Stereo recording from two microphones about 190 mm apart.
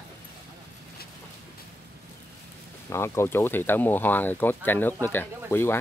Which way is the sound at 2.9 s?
15° left (ahead or behind).